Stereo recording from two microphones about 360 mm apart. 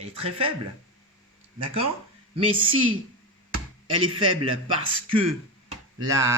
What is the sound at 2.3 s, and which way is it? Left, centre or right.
A woman's voice, centre.